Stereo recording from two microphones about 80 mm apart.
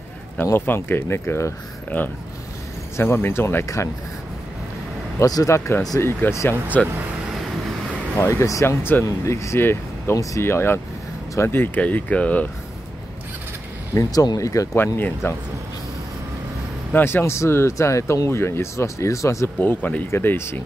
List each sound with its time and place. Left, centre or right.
0.5 s speech: left
3.0 s speech: left
5.2 s speech: left
6.7 s speech: centre
8.3 s speech: left; by 12.4 s centre
13.9 s speech: left
15.0 s speech: left
16.9 s speech: left
19.6 s speech: left